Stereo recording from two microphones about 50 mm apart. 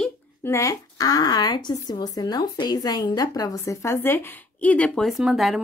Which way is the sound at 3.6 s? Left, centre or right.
Left.